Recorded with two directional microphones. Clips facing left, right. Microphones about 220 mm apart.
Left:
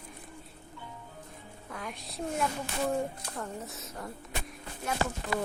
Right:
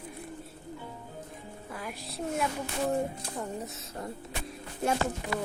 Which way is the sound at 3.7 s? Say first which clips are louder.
Right 2 dB; 30° right (ahead or behind).